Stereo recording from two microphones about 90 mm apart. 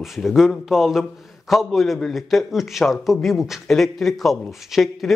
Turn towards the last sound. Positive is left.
turn(degrees=0)  # may be behind; listen again after turning